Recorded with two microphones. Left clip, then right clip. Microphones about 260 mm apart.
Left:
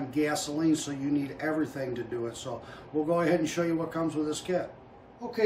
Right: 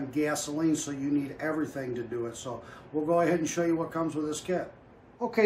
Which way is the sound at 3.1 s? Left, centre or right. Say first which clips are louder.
Right 1 dB; centre.